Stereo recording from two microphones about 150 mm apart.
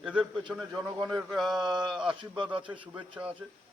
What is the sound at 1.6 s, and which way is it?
Speech, 30° right (ahead or behind).